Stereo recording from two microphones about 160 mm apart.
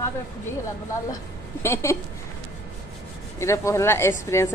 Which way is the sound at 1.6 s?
15° left (ahead or behind).